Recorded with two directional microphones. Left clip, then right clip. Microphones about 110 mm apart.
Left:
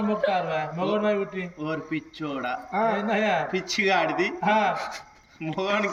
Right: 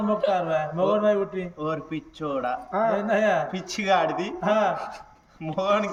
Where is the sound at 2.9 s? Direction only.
45° right (ahead or behind).